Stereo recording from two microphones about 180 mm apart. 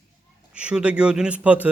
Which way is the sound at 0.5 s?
5° right (ahead or behind).